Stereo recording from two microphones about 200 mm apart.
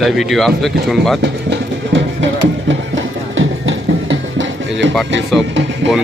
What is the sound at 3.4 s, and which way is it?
Music, 70° right (ahead or behind).